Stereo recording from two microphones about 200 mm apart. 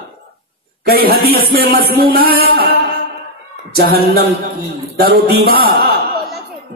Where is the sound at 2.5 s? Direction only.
50° right (ahead or behind).